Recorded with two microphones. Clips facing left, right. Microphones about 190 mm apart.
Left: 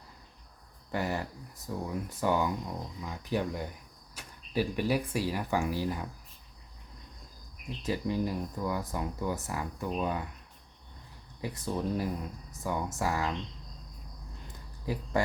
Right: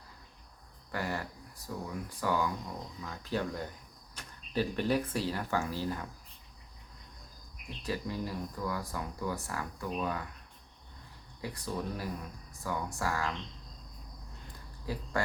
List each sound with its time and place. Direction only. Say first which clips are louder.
0.9 s speech: left 3 dB; 20° left (ahead or behind)
7.8 s speech: left 5 dB; 20° left (ahead or behind)
11.3 s speech: left 3 dB; 20° left (ahead or behind)
14.9 s speech: left 4 dB; 20° left (ahead or behind)